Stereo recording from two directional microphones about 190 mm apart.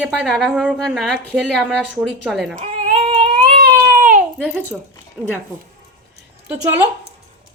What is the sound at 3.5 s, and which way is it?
Baby cry, 45° right (ahead or behind).